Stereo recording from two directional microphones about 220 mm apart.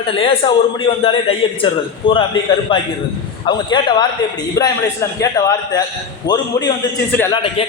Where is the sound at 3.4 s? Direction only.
20° left (ahead or behind).